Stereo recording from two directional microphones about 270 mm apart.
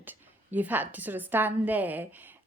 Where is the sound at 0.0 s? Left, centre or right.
Centre.